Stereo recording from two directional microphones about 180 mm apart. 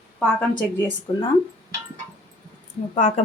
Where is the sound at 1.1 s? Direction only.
30° left (ahead or behind).